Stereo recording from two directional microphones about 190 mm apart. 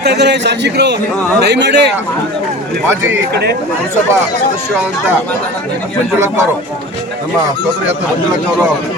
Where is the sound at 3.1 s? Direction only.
60° right (ahead or behind).